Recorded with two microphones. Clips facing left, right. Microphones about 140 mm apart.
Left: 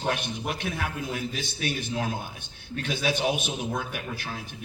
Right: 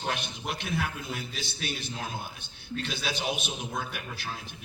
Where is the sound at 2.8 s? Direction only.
50° left (ahead or behind).